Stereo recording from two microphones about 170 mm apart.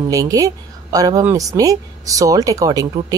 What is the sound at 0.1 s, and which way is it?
Speech, 20° right (ahead or behind).